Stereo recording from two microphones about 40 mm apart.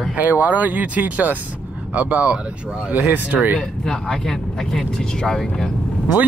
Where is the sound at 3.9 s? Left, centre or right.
Centre.